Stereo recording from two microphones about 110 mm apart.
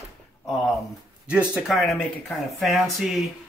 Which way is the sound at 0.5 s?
Centre (ahead or behind).